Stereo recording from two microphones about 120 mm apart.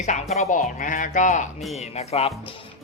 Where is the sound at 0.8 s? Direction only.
90° left.